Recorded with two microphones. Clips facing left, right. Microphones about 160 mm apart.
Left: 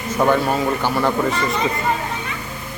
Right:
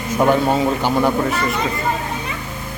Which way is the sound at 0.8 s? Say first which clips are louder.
Right 3 dB; 15° right (ahead or behind).